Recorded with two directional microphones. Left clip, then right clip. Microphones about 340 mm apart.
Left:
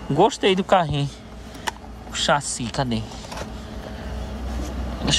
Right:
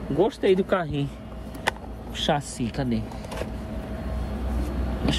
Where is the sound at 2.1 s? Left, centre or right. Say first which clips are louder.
Left 5 dB; centre.